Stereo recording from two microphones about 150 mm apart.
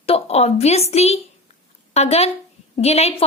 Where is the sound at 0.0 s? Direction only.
40° left (ahead or behind).